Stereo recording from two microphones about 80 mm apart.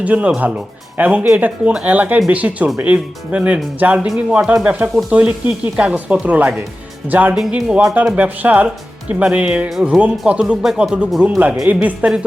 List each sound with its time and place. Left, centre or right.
0.0 s speech: centre
10.6 s speech: centre
11.2 s speech: centre